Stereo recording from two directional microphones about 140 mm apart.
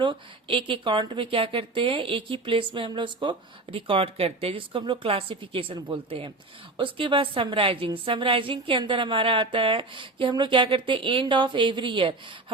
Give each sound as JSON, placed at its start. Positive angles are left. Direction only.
{"t": 0.0, "sound": "speech", "side_deg": -40}